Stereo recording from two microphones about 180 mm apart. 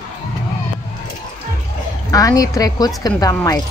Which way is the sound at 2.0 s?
20° left (ahead or behind).